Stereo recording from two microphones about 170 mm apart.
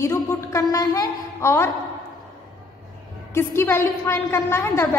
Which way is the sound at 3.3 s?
15° left (ahead or behind).